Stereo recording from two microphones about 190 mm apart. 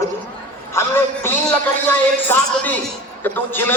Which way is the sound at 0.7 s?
10° left (ahead or behind).